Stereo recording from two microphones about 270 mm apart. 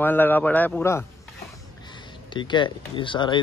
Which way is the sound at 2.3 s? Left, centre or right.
Centre.